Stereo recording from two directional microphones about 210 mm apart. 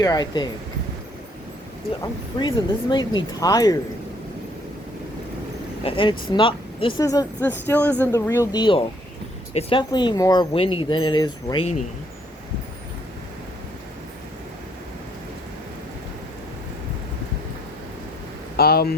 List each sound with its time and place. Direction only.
0.0 s speech: 20° left (ahead or behind)
2.0 s speech: 20° left (ahead or behind)
5.8 s speech: 25° left (ahead or behind)
18.5 s speech: 45° left (ahead or behind)